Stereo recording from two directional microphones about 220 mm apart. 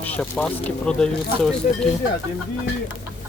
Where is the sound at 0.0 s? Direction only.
5° left (ahead or behind).